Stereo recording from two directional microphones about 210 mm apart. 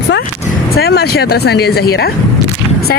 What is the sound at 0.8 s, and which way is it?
Speech, 50° left (ahead or behind).